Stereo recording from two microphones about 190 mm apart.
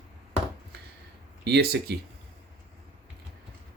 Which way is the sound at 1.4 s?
55° right (ahead or behind).